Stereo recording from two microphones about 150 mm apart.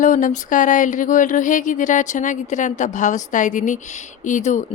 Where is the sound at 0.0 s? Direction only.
60° left (ahead or behind).